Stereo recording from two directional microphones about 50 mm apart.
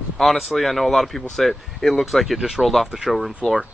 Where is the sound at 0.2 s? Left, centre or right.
Centre.